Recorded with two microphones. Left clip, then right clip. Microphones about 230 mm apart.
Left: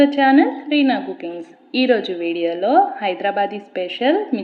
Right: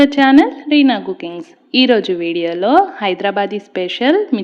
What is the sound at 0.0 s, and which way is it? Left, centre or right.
A woman's voice, right.